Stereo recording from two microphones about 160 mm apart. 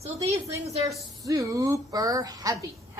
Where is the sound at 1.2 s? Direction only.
20° right (ahead or behind).